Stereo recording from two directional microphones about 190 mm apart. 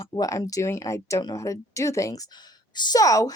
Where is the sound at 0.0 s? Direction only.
20° left (ahead or behind).